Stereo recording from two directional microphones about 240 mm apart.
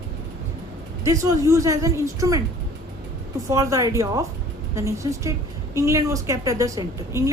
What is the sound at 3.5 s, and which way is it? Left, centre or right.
A woman's voice, centre.